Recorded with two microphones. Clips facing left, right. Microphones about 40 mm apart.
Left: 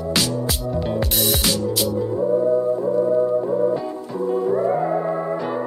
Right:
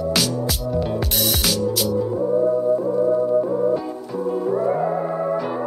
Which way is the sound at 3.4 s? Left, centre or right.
Centre.